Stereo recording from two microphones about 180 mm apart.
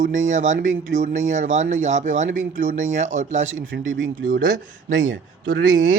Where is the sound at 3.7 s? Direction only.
90° right.